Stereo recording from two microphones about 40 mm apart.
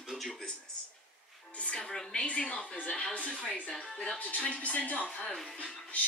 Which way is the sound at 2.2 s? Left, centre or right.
Left.